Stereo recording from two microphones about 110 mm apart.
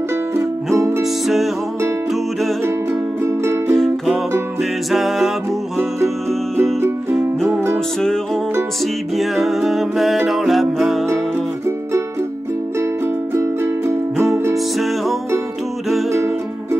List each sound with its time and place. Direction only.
0.7 s music: 25° right (ahead or behind)
1.2 s music: centre (ahead or behind)
3.3 s music: 25° right (ahead or behind)
3.7 s music: centre (ahead or behind)
6.8 s music: 25° right (ahead or behind)
9.1 s music: centre (ahead or behind)
13.3 s music: 25° right (ahead or behind)